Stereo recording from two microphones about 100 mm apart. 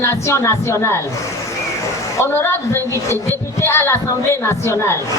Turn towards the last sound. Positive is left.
turn(degrees=25)  # may be behind; listen again after turning